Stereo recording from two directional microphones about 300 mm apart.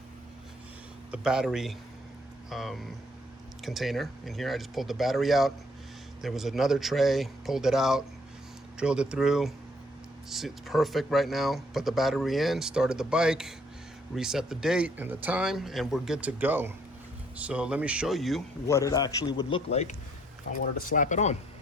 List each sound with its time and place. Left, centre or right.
1.1 s speech: centre; by 21.3 s left